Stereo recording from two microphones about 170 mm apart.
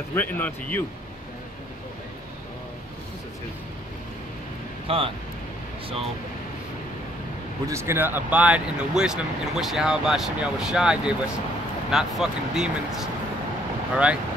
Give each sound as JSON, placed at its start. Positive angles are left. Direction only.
{"t": 0.1, "sound": "speech", "side_deg": 10}
{"t": 4.8, "sound": "speech", "side_deg": -35}
{"t": 7.6, "sound": "speech", "side_deg": -15}